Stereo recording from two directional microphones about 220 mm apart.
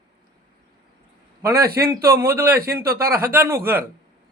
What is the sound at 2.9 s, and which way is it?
Speech, 40° right (ahead or behind).